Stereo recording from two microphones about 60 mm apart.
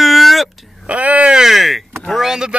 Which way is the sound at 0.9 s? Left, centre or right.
Right.